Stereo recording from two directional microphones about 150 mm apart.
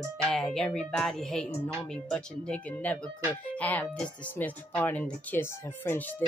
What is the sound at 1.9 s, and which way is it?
Music, 5° left (ahead or behind).